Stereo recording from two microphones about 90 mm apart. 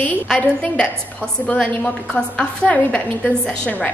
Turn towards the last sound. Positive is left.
turn(degrees=10)  # may be behind; listen again after turning